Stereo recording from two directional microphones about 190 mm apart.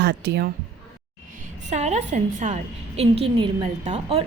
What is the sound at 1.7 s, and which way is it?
A woman's voice, 35° right (ahead or behind).